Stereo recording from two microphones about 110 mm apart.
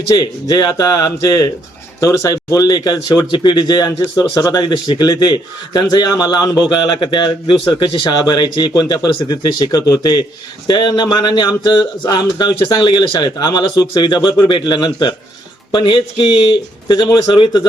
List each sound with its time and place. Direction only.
0.5 s a man's voice: 40° left (ahead or behind)